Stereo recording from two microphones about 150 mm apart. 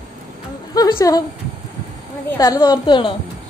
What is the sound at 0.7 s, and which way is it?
Speech, 25° left (ahead or behind).